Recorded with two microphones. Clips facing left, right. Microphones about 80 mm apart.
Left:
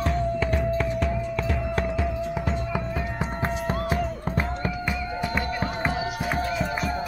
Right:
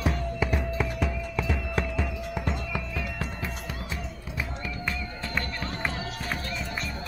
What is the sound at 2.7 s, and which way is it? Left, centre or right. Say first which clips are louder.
Music: left 5 dB; left.